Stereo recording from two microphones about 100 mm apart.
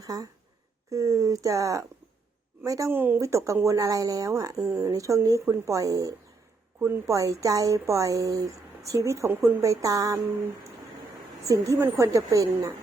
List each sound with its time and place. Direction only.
0.0 s a woman's voice: 35° right (ahead or behind)
2.9 s a woman's voice: 20° right (ahead or behind); by 6.1 s 35° right (ahead or behind)
6.7 s a woman's voice: 25° right (ahead or behind)